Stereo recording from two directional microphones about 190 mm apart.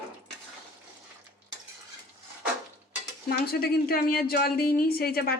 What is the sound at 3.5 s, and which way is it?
Speech, 55° left (ahead or behind).